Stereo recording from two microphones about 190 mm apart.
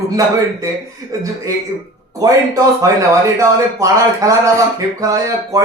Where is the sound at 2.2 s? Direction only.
20° right (ahead or behind).